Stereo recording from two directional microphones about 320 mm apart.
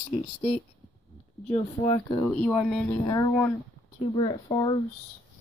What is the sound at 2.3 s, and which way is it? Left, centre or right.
Speech, centre.